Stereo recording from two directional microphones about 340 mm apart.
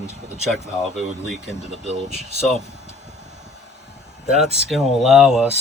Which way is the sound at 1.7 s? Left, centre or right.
Centre.